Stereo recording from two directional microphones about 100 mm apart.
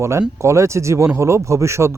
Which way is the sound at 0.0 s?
30° right (ahead or behind).